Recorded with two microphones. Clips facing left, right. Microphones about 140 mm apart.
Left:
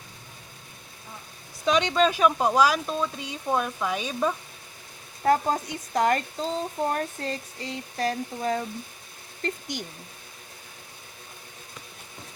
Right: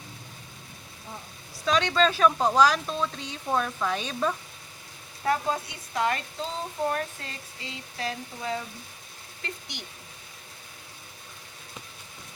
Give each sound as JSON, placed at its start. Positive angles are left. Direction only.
{"t": 1.6, "sound": "speech", "side_deg": 15}
{"t": 5.2, "sound": "speech", "side_deg": 40}